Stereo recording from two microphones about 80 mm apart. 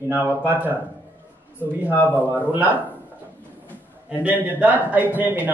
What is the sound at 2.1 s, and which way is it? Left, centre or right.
Speech, right.